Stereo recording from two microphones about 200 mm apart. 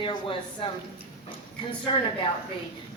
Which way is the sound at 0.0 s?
25° left (ahead or behind).